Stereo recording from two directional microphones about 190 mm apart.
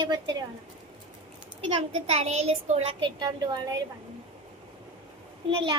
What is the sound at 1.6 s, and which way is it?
A woman's voice, 30° right (ahead or behind).